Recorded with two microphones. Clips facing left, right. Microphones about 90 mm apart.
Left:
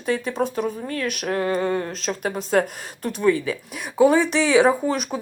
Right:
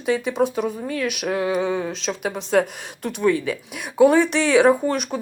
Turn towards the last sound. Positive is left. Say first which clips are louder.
# right 2 dB
turn(degrees=0)  # may be behind; listen again after turning